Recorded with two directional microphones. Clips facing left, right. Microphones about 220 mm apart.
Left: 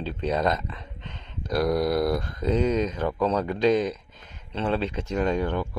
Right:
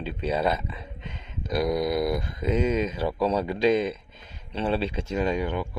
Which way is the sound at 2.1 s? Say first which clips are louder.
Left 1 dB; 20° right (ahead or behind).